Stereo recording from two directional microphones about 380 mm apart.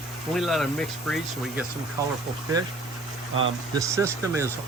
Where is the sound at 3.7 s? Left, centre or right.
Centre.